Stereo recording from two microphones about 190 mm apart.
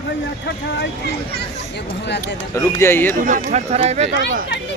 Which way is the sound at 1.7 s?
65° left (ahead or behind).